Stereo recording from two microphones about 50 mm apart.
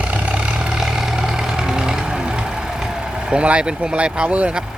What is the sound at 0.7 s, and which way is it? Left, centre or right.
Vehicle, centre.